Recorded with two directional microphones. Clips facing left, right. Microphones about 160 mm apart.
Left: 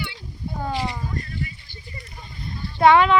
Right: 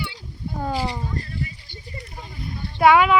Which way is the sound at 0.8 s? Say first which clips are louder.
Right 1 dB; 30° right (ahead or behind).